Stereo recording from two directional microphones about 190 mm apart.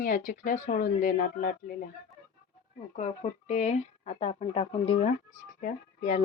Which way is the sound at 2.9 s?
40° left (ahead or behind).